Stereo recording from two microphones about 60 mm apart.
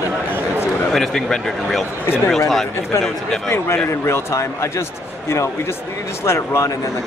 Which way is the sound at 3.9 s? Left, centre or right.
Left.